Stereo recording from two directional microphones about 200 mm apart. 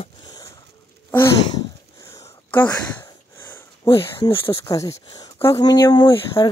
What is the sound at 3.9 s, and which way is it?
Speech, 25° left (ahead or behind).